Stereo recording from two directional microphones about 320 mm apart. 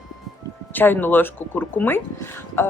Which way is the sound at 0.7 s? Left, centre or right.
Centre.